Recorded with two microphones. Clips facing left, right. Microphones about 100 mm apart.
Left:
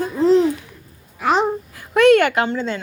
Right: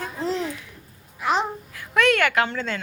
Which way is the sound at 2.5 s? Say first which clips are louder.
Left 6 dB; 25° left (ahead or behind).